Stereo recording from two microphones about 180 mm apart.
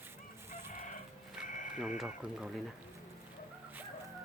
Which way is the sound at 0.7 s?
45° left (ahead or behind).